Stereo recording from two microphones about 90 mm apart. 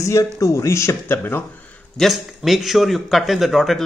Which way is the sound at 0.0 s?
35° left (ahead or behind).